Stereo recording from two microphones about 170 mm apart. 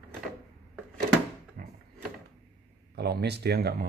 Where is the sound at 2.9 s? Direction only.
75° right (ahead or behind).